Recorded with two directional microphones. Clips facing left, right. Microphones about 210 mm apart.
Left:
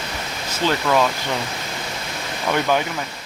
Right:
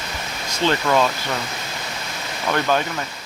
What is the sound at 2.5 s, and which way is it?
Speech, 10° left (ahead or behind).